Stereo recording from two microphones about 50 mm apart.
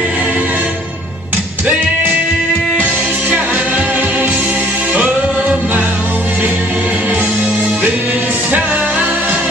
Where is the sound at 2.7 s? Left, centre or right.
Right.